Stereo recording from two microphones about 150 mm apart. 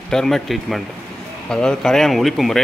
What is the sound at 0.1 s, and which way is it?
Speech, 5° left (ahead or behind).